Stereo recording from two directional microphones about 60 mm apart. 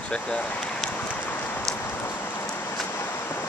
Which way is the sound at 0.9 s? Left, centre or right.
Left.